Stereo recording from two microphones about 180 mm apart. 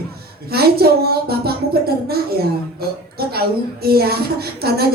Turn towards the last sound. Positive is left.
turn(degrees=-60)  # may be behind; listen again after turning